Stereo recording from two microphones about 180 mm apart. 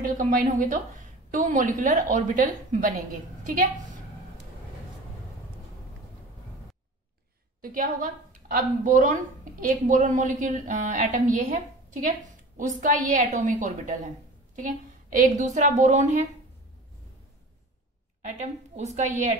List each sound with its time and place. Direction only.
0.0 s a woman's voice: 50° right (ahead or behind)
7.6 s a woman's voice: 50° right (ahead or behind)
18.2 s a woman's voice: 40° right (ahead or behind)